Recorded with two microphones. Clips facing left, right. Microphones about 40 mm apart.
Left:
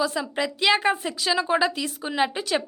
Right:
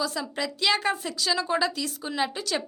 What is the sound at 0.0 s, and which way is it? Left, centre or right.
A woman's voice, left.